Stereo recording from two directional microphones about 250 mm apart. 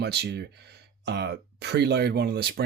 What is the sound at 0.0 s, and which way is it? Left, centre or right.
Speech, right.